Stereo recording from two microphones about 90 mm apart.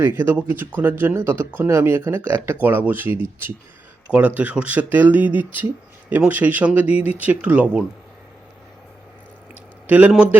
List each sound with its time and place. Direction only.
0.0 s speech: 25° right (ahead or behind)
9.8 s a man's voice: 20° right (ahead or behind)